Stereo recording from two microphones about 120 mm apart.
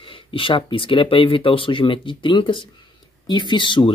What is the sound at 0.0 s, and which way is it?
Speech, 45° left (ahead or behind).